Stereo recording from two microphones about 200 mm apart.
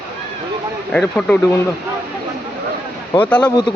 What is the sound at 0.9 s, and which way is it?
Speech, 5° left (ahead or behind).